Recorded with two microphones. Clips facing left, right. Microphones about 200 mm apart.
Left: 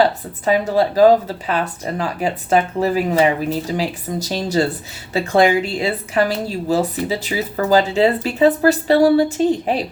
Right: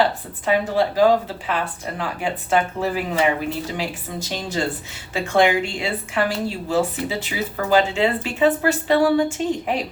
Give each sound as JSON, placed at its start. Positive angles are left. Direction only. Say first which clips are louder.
{"t": 0.4, "sound": "a woman's voice", "louder": "left 3 dB", "side_deg": 40}